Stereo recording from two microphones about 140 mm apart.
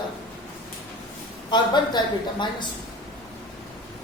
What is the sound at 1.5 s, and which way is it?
Speech, 30° left (ahead or behind).